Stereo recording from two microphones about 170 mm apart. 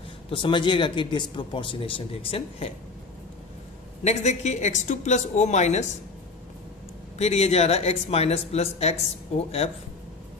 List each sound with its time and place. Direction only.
0.3 s speech: 30° left (ahead or behind)
4.0 s speech: 40° left (ahead or behind)
7.2 s speech: 40° left (ahead or behind)